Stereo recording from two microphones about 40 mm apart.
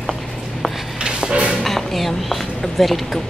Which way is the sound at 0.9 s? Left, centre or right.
Right.